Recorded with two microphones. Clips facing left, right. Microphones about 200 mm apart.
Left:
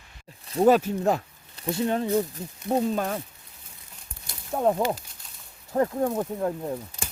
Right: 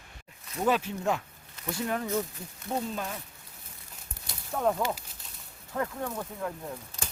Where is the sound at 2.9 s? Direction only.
55° left (ahead or behind).